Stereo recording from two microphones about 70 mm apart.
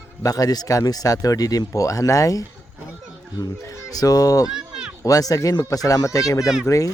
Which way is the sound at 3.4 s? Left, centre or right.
Left.